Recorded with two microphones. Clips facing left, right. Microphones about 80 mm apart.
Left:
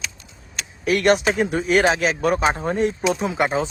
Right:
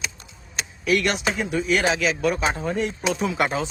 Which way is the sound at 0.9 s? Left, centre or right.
Left.